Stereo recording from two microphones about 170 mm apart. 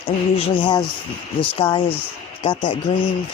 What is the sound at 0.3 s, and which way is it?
Speech, 35° left (ahead or behind).